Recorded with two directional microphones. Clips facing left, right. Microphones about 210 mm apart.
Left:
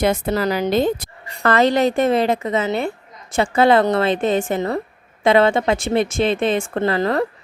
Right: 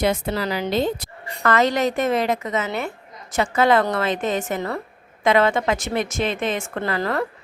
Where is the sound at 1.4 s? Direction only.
30° left (ahead or behind).